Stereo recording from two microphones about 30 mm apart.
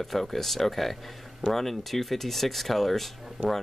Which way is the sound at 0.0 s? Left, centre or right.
Centre.